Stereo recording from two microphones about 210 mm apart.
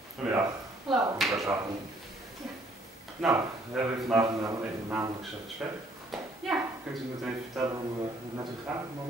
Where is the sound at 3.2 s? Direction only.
Centre (ahead or behind).